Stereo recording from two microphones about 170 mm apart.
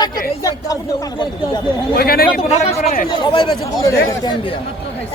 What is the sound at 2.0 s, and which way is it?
Speech, 65° left (ahead or behind).